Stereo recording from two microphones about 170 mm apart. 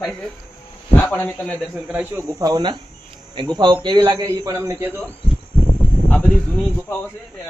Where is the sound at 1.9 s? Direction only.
10° right (ahead or behind).